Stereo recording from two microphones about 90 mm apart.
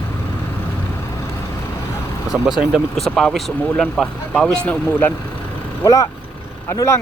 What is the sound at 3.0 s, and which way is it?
Speech, 5° left (ahead or behind).